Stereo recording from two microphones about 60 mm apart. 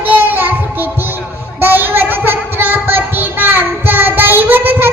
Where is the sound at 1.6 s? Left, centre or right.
Right.